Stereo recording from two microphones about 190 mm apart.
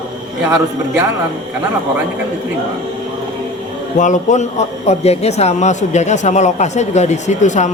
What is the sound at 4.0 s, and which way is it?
A man's voice, 40° left (ahead or behind).